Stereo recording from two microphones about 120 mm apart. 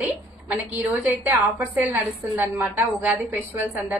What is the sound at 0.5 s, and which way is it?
A woman's voice, 15° right (ahead or behind).